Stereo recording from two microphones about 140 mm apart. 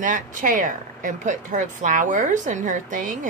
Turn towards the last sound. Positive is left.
turn(degrees=-65)  # may be behind; listen again after turning